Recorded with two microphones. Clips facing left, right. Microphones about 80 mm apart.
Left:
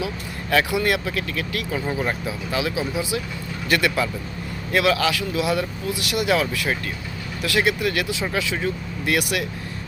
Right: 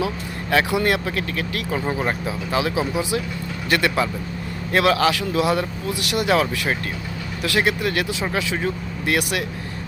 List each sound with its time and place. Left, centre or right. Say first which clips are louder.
0.5 s speech: right 1 dB; right